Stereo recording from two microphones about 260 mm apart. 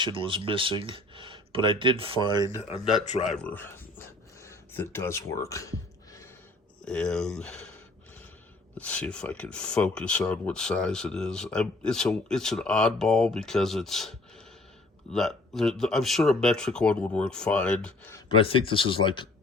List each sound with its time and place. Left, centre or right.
0.0 s speech: centre
2.6 s speech: left
3.2 s a sound: centre
6.8 s speech: centre
8.8 s speech: centre
18.3 s speech: centre